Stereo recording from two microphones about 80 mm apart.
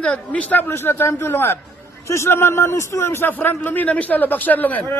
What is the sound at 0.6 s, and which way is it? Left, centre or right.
A man's voice, left.